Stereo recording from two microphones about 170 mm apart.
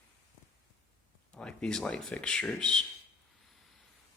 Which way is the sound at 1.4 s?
5° left (ahead or behind).